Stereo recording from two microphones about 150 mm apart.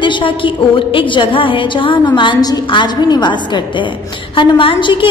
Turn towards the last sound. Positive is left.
turn(degrees=35)  # may be behind; listen again after turning